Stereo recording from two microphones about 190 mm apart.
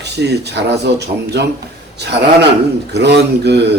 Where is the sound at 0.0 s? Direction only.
60° right (ahead or behind).